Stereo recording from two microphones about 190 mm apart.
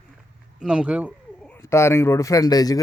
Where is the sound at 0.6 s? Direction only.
5° right (ahead or behind).